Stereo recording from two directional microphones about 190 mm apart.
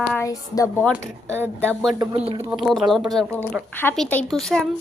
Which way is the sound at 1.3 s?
10° right (ahead or behind).